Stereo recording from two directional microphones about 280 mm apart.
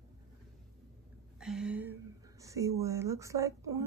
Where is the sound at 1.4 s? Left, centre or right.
Centre.